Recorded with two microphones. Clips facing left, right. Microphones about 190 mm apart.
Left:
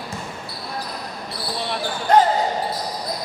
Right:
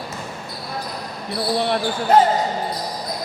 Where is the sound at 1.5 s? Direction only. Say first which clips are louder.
Right 7 dB; 55° right (ahead or behind).